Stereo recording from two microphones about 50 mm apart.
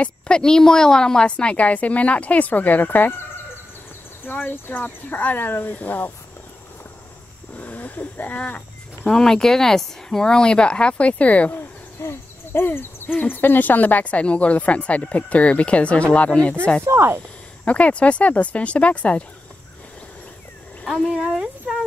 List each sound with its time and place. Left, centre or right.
0.4 s speech: centre
1.3 s speech: left
4.3 s speech: left
7.5 s a sound: left
9.1 s speech: centre; by 11.5 s left
12.0 s speech: left
16.8 s speech: right
17.6 s speech: left
20.8 s speech: centre
21.3 s speech: centre